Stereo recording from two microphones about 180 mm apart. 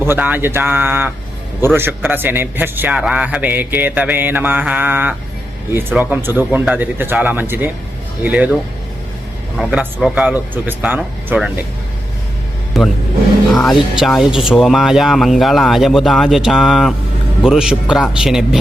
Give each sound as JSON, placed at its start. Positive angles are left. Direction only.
{"t": 0.0, "sound": "a man's voice", "side_deg": -10}
{"t": 9.6, "sound": "a man's voice", "side_deg": -5}
{"t": 12.7, "sound": "speech", "side_deg": 0}